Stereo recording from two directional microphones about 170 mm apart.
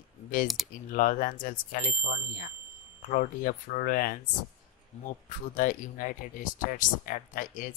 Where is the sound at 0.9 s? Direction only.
55° left (ahead or behind).